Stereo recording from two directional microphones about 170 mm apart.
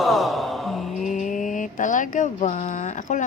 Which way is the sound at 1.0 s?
50° left (ahead or behind).